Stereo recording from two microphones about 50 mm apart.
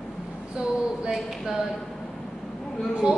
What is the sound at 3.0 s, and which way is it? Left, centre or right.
Speech, centre.